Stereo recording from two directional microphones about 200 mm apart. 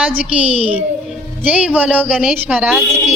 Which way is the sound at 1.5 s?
10° right (ahead or behind).